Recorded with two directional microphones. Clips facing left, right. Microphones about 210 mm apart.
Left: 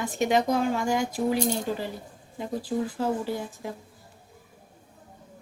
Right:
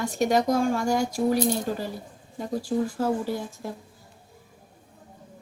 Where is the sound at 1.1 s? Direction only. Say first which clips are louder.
Right 2 dB; 10° left (ahead or behind).